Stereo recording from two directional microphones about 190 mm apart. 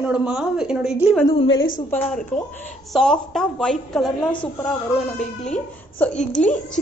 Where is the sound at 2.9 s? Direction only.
Centre (ahead or behind).